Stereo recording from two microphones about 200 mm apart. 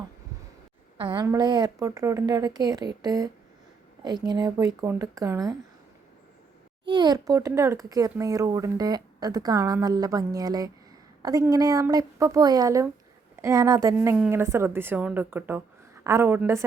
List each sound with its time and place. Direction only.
0.9 s speech: 25° right (ahead or behind)
6.8 s speech: 20° right (ahead or behind)